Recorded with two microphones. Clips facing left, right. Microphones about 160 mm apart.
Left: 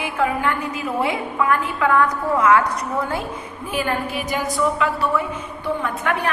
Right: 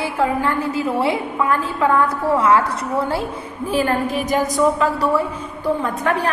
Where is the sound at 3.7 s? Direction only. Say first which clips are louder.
Right 4 dB; 40° right (ahead or behind).